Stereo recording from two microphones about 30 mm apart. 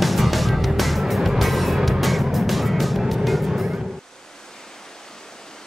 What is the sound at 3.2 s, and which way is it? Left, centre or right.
Vehicle, centre.